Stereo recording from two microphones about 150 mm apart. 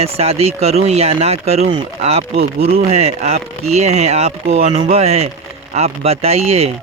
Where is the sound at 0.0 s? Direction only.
45° right (ahead or behind).